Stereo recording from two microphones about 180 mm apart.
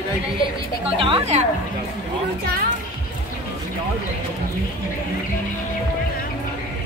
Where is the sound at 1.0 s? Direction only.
35° right (ahead or behind).